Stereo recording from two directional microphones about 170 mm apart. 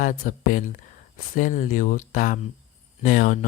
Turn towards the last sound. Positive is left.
turn(degrees=50)  # may be behind; listen again after turning